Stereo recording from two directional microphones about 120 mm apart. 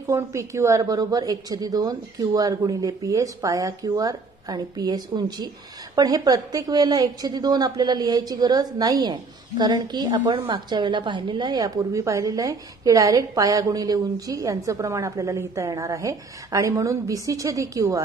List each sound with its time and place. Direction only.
0.1 s a woman's voice: 25° right (ahead or behind)